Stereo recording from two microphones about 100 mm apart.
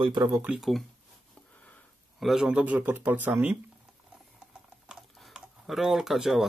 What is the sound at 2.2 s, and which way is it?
Speech, 5° right (ahead or behind).